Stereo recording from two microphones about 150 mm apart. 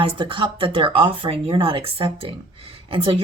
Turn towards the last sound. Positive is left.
turn(degrees=-35)  # may be behind; listen again after turning